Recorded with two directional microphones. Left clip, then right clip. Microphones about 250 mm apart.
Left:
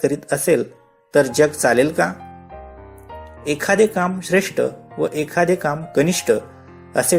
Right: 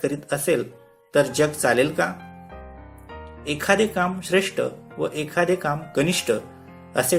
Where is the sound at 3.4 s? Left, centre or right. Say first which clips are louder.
Left 4 dB; left.